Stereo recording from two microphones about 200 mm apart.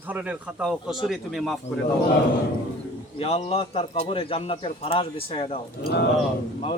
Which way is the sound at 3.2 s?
30° left (ahead or behind).